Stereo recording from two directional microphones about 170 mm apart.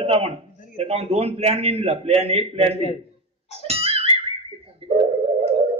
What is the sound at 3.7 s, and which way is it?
Music, 35° right (ahead or behind).